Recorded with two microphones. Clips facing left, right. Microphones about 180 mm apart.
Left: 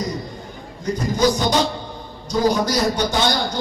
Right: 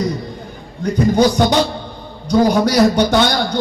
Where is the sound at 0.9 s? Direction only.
65° right (ahead or behind).